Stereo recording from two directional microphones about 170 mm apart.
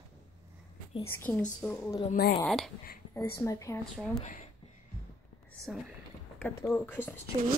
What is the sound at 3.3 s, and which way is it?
Speech, 15° left (ahead or behind).